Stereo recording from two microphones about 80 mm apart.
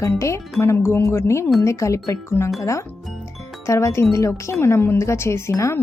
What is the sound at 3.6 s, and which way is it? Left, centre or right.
Speech, left.